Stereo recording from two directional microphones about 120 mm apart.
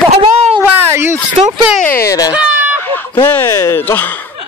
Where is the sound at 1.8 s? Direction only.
20° left (ahead or behind).